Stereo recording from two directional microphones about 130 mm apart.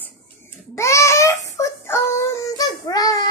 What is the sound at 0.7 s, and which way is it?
Child singing, 20° left (ahead or behind).